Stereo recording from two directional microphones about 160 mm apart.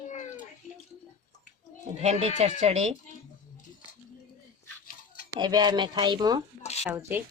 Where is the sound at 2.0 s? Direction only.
45° right (ahead or behind).